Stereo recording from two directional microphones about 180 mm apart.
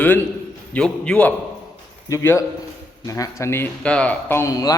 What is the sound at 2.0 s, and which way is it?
A man's voice, 15° left (ahead or behind).